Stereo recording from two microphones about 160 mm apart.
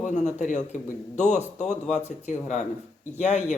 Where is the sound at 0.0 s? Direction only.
50° left (ahead or behind).